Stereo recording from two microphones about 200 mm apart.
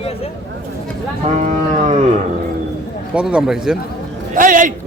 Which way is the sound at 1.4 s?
35° right (ahead or behind).